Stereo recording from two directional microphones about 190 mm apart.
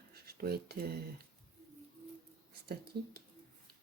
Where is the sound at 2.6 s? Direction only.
55° right (ahead or behind).